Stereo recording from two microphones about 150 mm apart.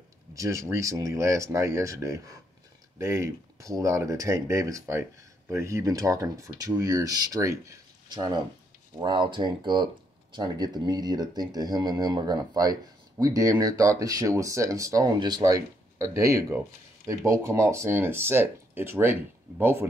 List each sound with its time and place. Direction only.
0.3 s speech: 20° right (ahead or behind)